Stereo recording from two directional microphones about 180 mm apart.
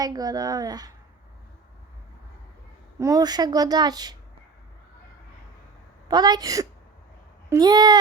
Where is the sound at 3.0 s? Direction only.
20° right (ahead or behind).